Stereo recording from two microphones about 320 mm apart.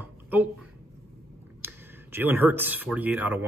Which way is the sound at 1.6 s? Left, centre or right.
Centre.